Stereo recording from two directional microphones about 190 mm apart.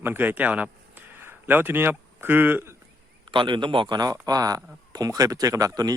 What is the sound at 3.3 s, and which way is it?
Speech, 25° right (ahead or behind).